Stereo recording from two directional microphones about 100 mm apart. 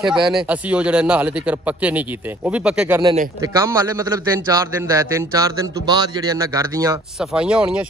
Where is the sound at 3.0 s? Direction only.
40° right (ahead or behind).